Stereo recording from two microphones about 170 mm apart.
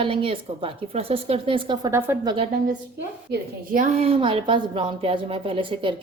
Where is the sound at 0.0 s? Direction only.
30° right (ahead or behind).